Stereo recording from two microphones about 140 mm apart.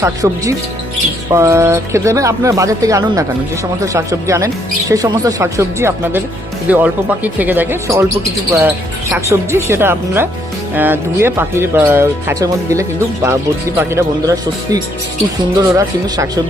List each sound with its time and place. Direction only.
0.0 s speech: 25° right (ahead or behind)